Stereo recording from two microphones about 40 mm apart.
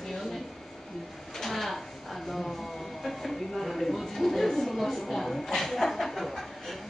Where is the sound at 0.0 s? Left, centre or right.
Centre.